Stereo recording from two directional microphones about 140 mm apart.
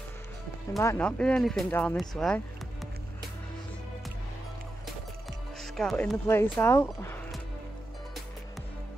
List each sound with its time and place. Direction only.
0.7 s speech: 20° left (ahead or behind)
1.0 s speech: 5° left (ahead or behind)
5.6 s speech: 5° left (ahead or behind)
6.2 s speech: 15° left (ahead or behind)